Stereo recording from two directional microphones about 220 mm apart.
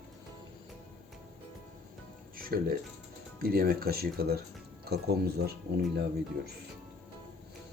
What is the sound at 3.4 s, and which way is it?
Speech, 40° right (ahead or behind).